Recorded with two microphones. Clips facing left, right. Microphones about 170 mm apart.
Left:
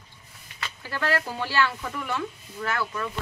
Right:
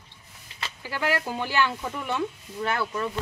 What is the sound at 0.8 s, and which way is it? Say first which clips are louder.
Speech: even; 15° right (ahead or behind).